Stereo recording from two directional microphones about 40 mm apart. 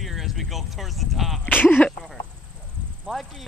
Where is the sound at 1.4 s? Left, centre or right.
Left.